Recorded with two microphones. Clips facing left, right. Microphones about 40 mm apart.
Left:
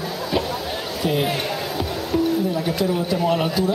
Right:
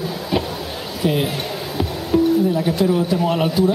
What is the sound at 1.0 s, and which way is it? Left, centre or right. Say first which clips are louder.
Speech: right 2 dB; centre.